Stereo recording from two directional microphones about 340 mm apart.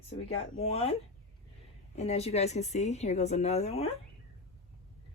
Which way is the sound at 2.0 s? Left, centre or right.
Centre.